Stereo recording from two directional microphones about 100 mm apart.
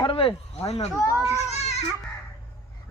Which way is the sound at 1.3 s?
90° left.